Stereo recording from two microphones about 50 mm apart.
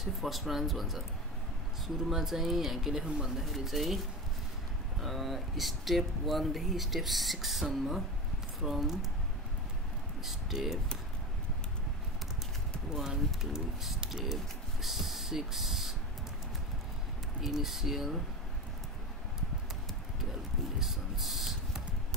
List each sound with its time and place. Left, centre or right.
0.0 s speech: centre
2.0 s speech: centre
3.4 s speech: centre
5.0 s speech: centre
10.2 s speech: centre
12.9 s speech: centre
17.4 s speech: centre
20.8 s spray: centre